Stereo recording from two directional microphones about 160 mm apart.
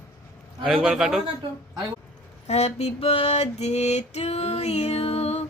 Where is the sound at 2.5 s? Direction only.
45° left (ahead or behind).